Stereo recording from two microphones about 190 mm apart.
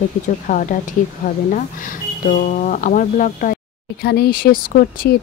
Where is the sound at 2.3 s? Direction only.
45° left (ahead or behind).